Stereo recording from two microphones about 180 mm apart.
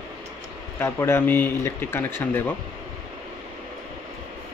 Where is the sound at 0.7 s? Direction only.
15° left (ahead or behind).